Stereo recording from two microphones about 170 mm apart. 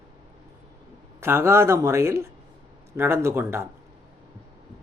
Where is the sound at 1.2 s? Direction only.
15° right (ahead or behind).